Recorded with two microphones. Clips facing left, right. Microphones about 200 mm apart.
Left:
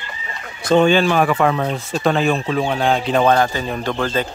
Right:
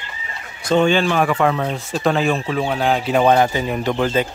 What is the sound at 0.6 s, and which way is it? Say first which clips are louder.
Speech: left 2 dB; 60° left (ahead or behind).